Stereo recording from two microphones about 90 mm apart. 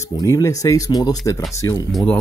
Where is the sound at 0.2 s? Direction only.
40° left (ahead or behind).